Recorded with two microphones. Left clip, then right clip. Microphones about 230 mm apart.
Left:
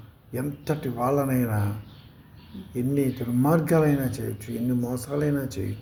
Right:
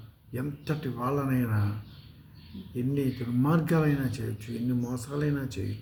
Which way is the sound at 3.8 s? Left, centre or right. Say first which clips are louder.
Left 6 dB; centre.